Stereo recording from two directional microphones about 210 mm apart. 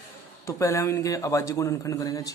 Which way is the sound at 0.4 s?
15° left (ahead or behind).